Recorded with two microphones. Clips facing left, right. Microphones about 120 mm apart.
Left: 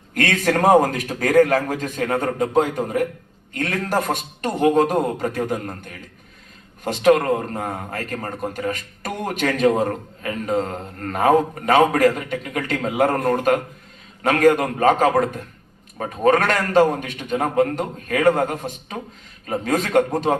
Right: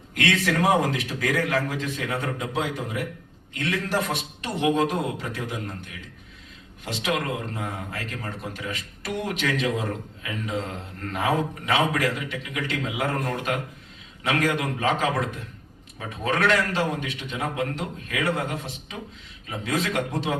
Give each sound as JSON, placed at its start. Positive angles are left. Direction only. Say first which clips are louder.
{"t": 0.1, "sound": "a man's voice", "louder": "left 4 dB", "side_deg": 45}